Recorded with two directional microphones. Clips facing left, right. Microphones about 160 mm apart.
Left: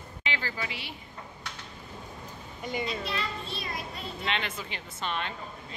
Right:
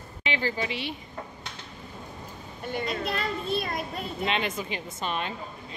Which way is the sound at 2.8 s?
50° right (ahead or behind).